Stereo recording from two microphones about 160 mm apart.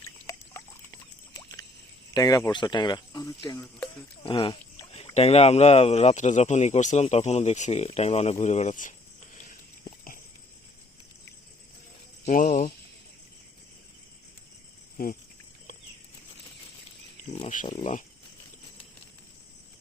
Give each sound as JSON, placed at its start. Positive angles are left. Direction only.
{"t": 0.3, "sound": "rodents", "side_deg": 20}
{"t": 2.1, "sound": "speech", "side_deg": 25}
{"t": 4.2, "sound": "speech", "side_deg": 35}
{"t": 12.3, "sound": "speech", "side_deg": 60}
{"t": 17.5, "sound": "speech", "side_deg": 55}